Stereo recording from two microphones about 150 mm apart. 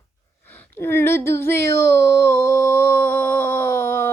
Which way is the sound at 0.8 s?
15° left (ahead or behind).